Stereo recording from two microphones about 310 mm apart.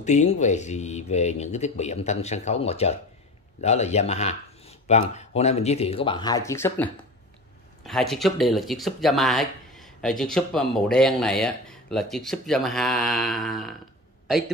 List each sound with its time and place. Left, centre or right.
0.0 s speech: left; by 13.7 s centre